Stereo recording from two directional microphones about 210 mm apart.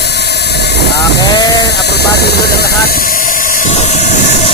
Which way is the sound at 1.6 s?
50° left (ahead or behind).